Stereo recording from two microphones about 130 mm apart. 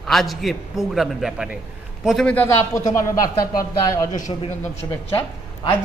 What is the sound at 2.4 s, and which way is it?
Speech, 25° left (ahead or behind).